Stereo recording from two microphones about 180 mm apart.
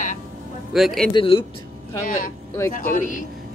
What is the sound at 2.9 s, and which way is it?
Speech, 45° left (ahead or behind).